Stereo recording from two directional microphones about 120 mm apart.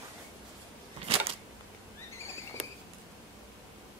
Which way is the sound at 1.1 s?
50° right (ahead or behind).